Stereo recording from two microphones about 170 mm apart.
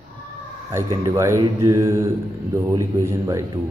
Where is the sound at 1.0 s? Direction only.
20° right (ahead or behind).